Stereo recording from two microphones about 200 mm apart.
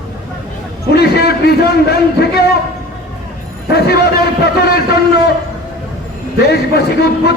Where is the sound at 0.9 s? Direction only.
55° left (ahead or behind).